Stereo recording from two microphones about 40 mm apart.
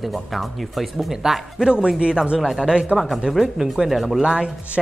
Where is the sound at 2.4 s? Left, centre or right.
Centre.